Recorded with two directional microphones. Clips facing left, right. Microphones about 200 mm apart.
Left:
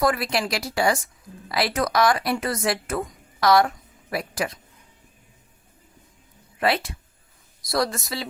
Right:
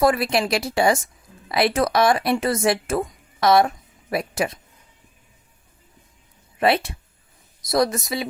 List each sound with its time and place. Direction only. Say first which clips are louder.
0.0 s speech: right 4 dB; 25° right (ahead or behind)
6.6 s speech: right 4 dB; 25° right (ahead or behind)